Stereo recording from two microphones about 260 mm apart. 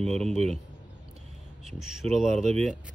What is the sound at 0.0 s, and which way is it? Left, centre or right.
Speech, centre.